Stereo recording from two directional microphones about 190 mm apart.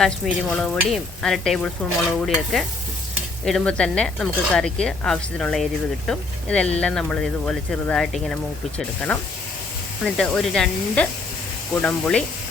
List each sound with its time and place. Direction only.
0.0 s speech: 5° left (ahead or behind)
10.0 s speech: 5° left (ahead or behind)